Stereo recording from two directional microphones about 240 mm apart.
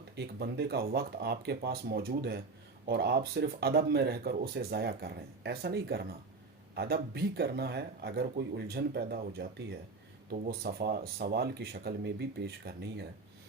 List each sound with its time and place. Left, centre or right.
0.2 s speech: right